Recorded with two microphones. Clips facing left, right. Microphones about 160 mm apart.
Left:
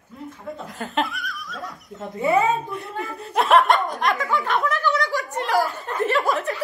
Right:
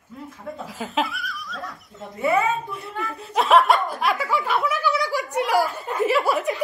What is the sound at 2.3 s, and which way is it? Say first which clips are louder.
Speech: left 3 dB; 40° left (ahead or behind).